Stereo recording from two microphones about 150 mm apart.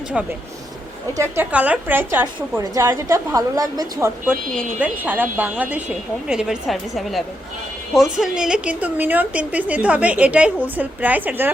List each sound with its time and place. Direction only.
1.1 s a woman's voice: 15° right (ahead or behind)